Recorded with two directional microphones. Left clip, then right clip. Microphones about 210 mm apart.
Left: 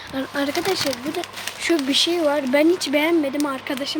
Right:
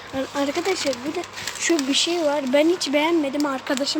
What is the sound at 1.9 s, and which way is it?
Speech, 15° left (ahead or behind).